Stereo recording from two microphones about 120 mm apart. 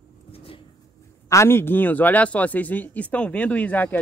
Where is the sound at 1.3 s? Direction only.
20° left (ahead or behind).